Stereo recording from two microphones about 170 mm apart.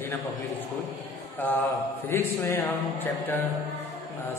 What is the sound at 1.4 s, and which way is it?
A man's voice, 10° left (ahead or behind).